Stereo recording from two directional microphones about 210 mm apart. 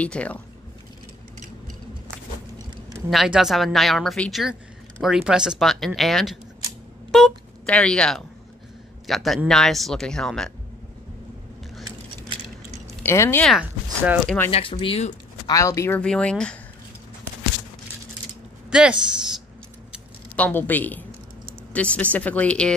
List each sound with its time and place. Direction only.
0.0 s speech: 5° left (ahead or behind)
3.1 s speech: centre (ahead or behind)
13.0 s speech: 10° left (ahead or behind)
13.5 s speech: 5° right (ahead or behind)
14.5 s speech: 25° left (ahead or behind)
15.4 s speech: 15° left (ahead or behind)
18.7 s speech: 5° right (ahead or behind)
20.3 s speech: 10° left (ahead or behind)